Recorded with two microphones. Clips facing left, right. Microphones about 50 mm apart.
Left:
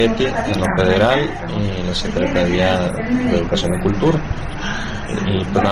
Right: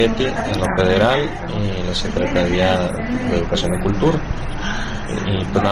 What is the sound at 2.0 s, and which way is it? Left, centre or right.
Speech, left.